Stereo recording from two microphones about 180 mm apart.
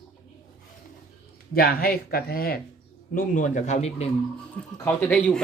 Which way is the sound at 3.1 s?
45° left (ahead or behind).